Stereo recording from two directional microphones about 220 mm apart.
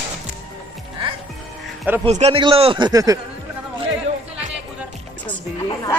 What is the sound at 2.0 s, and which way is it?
A man's voice, 30° right (ahead or behind).